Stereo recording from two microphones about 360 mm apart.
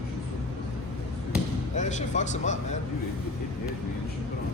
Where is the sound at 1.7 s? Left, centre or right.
Centre.